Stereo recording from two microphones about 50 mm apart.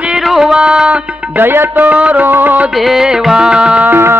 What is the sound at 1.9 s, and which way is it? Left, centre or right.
Music, right.